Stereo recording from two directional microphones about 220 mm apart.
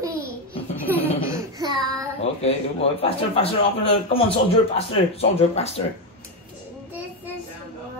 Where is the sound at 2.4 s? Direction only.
25° left (ahead or behind).